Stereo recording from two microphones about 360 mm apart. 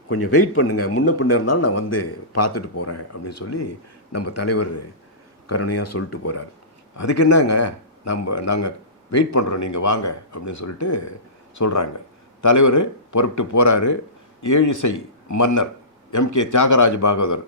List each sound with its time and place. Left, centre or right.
0.1 s speech: left